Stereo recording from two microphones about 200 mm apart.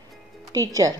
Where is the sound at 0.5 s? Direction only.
15° right (ahead or behind).